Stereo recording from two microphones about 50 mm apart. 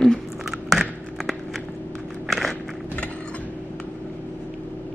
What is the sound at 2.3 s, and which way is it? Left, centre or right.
Biting, centre.